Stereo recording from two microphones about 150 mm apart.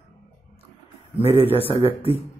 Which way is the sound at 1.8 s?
40° left (ahead or behind).